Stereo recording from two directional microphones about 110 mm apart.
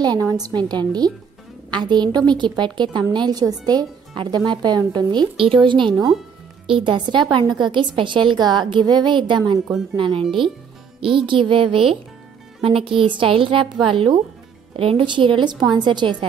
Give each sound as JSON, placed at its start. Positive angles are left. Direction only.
{"t": 0.3, "sound": "a woman's voice", "side_deg": -35}